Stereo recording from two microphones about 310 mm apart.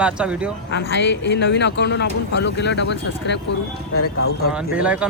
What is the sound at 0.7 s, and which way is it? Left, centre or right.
Speech, left.